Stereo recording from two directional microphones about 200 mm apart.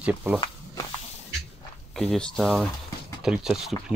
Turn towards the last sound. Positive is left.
turn(degrees=-5)  # may be behind; listen again after turning